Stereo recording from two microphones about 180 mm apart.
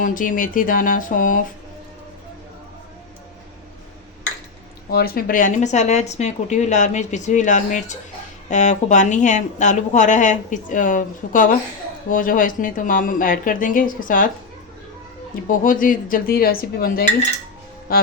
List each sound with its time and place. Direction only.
0.0 s a woman's voice: 50° left (ahead or behind)
4.9 s a woman's voice: 60° left (ahead or behind)
15.4 s speech: 50° left (ahead or behind)